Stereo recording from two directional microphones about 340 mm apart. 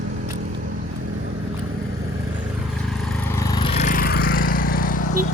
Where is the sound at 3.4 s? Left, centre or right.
Centre.